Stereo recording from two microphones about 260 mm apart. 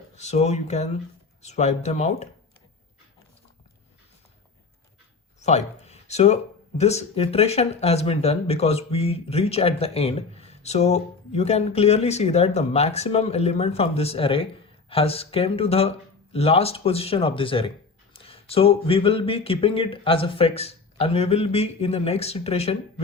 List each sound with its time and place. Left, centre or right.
0.2 s speech: left
5.4 s speech: left